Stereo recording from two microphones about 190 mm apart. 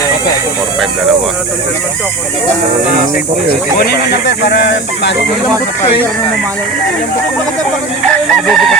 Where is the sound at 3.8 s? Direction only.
60° left (ahead or behind).